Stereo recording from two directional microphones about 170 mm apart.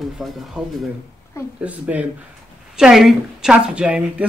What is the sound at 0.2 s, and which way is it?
A woman's voice, centre (ahead or behind).